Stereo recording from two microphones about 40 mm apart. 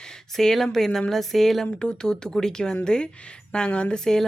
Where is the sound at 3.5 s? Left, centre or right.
Left.